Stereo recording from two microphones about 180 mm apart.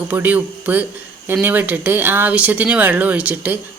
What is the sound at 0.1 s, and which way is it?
Speech, 10° right (ahead or behind).